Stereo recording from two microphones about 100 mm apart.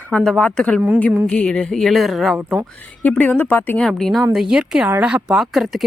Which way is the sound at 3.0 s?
15° left (ahead or behind).